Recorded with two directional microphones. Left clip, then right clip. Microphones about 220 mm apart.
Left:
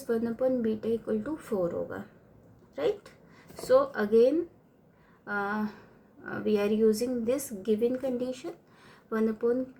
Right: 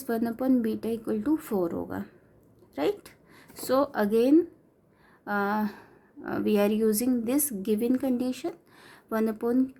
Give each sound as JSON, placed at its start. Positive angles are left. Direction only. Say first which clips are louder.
{"t": 0.0, "sound": "a woman's voice", "louder": "left 1 dB", "side_deg": -45}